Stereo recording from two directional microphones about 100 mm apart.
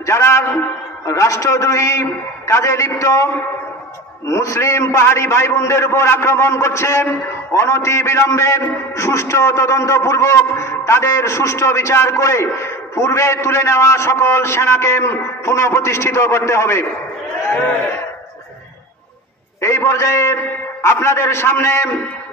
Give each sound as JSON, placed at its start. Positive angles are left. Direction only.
{"t": 0.0, "sound": "a man's voice", "side_deg": 30}
{"t": 4.3, "sound": "a man's voice", "side_deg": 30}
{"t": 19.6, "sound": "a man's voice", "side_deg": 30}